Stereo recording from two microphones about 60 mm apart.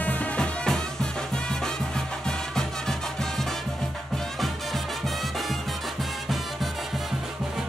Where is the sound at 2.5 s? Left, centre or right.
Centre.